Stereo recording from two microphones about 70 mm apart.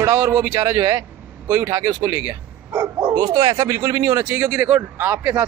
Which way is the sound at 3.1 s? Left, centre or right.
Right.